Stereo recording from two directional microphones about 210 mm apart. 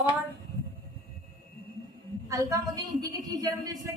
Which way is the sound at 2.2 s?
15° right (ahead or behind).